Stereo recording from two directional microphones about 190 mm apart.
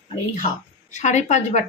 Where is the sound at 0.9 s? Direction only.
40° left (ahead or behind).